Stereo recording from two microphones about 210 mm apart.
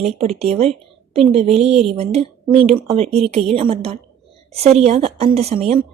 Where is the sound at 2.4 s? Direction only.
5° right (ahead or behind).